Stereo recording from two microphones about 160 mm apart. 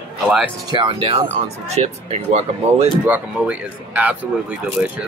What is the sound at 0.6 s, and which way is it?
Speech, 30° right (ahead or behind).